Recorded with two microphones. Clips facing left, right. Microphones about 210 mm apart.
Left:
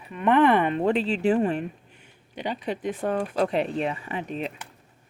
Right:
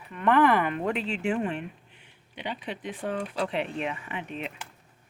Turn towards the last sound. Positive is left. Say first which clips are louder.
# left 5 dB
turn(degrees=35)  # may be behind; listen again after turning